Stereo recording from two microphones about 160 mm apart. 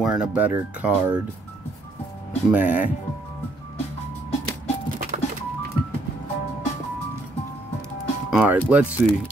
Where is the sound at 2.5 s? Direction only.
10° right (ahead or behind).